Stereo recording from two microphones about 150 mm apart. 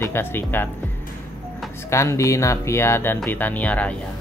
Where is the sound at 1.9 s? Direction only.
20° left (ahead or behind).